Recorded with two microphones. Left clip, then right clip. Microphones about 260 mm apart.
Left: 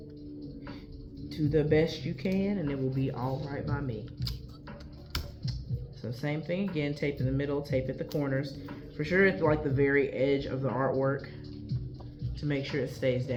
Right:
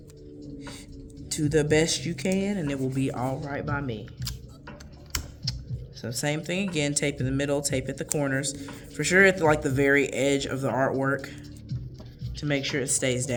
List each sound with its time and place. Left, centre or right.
1.3 s speech: right
5.4 s a sound: right
6.0 s speech: right
12.4 s speech: right